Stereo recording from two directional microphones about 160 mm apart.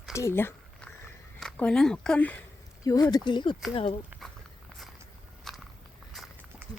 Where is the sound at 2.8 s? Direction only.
25° left (ahead or behind).